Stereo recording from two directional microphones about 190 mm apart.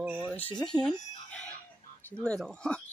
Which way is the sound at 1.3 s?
5° left (ahead or behind).